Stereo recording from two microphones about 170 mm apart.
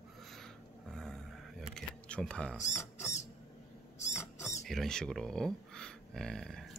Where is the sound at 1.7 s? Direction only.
5° left (ahead or behind).